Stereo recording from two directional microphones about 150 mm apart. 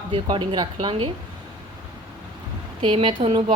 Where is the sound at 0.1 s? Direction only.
30° right (ahead or behind).